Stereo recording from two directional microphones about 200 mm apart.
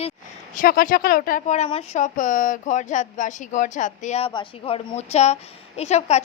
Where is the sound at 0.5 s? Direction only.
45° left (ahead or behind).